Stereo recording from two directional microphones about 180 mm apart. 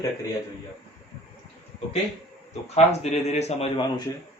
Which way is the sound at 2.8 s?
35° left (ahead or behind).